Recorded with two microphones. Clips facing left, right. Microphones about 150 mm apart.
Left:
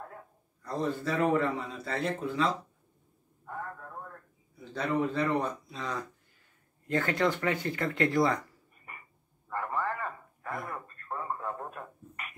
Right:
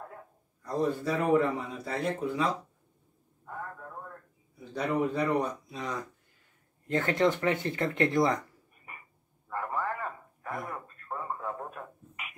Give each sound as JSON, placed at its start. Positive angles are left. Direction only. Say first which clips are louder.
{"t": 0.7, "sound": "a man's voice", "louder": "right 2 dB", "side_deg": -10}
{"t": 4.7, "sound": "a man's voice", "louder": "right 1 dB", "side_deg": -15}
{"t": 9.5, "sound": "radio", "louder": "even", "side_deg": -5}